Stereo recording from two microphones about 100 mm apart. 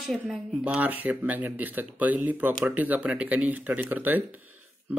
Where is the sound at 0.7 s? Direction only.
15° right (ahead or behind).